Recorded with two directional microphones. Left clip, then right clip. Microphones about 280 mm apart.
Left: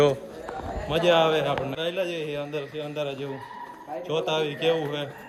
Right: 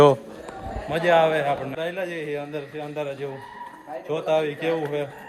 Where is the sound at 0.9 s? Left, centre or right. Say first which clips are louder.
Right 2 dB; centre.